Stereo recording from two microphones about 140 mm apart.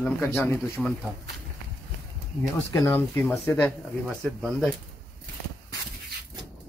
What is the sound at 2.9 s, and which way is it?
Speech, 15° left (ahead or behind).